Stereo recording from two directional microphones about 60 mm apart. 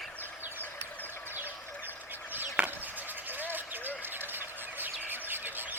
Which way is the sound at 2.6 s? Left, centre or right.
Centre.